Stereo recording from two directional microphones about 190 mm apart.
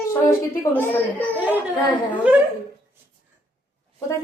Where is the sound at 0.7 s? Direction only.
10° left (ahead or behind).